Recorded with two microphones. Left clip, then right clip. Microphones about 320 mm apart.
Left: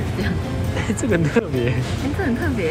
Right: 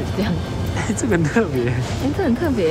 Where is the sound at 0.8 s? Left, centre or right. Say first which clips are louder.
Right 1 dB; centre.